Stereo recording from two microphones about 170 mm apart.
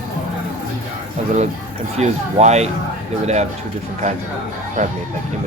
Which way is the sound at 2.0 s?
40° right (ahead or behind).